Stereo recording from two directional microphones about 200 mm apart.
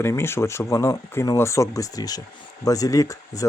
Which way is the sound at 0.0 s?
10° left (ahead or behind).